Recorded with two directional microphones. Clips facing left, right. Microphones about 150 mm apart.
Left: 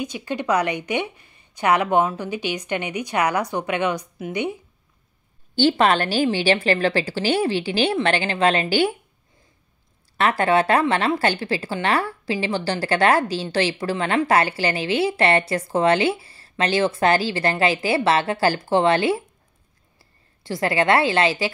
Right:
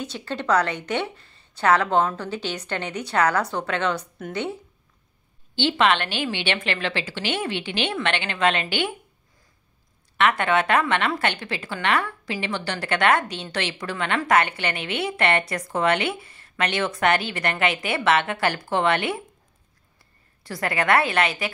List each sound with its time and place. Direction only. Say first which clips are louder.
0.0 s a woman's voice: left 3 dB; 10° left (ahead or behind)
5.6 s a woman's voice: left 3 dB; 40° left (ahead or behind)
10.1 s a woman's voice: left 2 dB; 35° left (ahead or behind)
20.4 s a woman's voice: left 4 dB; 25° left (ahead or behind)